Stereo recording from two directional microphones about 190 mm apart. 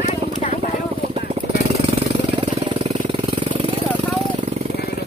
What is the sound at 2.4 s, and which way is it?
Vehicle, 35° right (ahead or behind).